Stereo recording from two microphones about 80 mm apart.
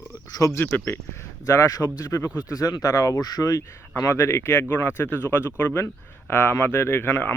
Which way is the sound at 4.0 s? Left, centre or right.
Left.